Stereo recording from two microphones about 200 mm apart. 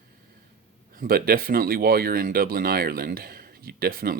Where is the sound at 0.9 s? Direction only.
45° right (ahead or behind).